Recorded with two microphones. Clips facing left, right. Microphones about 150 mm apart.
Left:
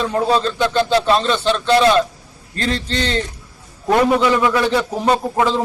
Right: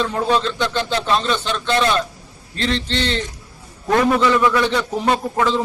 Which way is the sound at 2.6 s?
40° left (ahead or behind).